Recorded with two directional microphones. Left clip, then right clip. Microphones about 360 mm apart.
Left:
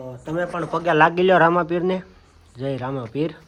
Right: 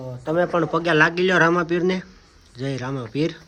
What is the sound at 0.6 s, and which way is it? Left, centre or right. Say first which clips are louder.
A man's voice: left 3 dB; centre.